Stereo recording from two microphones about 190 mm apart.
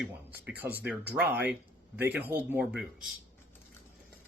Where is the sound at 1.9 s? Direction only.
10° right (ahead or behind).